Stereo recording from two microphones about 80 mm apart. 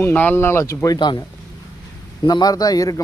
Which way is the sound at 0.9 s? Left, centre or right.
Left.